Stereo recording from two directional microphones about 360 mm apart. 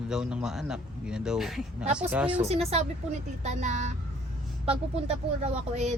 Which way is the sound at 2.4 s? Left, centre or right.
Centre.